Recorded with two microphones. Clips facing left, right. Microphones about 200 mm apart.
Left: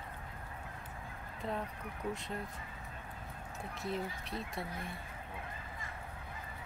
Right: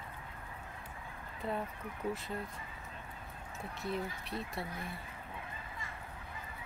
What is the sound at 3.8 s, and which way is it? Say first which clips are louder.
Speech: right 1 dB; centre (ahead or behind).